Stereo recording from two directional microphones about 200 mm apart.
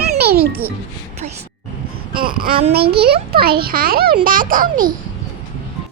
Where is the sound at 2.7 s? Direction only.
50° right (ahead or behind).